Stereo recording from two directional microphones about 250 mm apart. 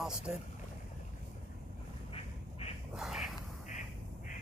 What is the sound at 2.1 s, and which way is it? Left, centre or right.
Duck, left.